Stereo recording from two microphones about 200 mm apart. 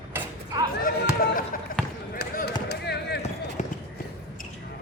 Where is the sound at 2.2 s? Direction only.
55° left (ahead or behind).